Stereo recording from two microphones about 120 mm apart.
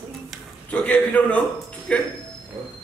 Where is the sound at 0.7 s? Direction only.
10° left (ahead or behind).